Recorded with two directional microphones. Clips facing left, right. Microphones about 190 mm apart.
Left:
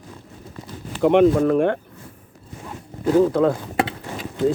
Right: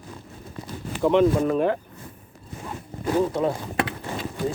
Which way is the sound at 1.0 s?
65° left (ahead or behind).